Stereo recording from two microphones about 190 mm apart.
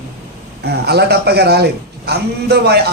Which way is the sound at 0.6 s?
60° right (ahead or behind).